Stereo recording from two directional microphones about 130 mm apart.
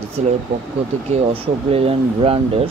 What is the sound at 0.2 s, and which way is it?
Speech, 60° right (ahead or behind).